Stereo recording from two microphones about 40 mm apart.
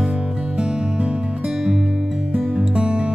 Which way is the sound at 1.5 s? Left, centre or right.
Centre.